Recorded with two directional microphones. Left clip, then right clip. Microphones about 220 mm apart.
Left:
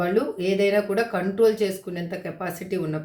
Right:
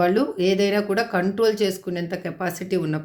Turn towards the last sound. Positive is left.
turn(degrees=-45)  # may be behind; listen again after turning